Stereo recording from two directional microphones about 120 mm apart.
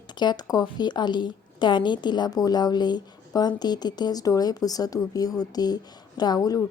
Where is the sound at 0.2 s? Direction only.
35° left (ahead or behind).